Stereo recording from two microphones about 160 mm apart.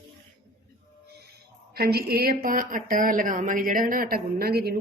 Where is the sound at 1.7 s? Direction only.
80° right.